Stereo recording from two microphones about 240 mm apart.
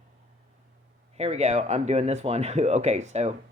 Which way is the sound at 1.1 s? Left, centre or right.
Right.